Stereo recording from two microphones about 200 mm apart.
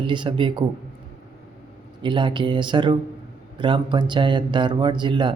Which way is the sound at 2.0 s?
25° right (ahead or behind).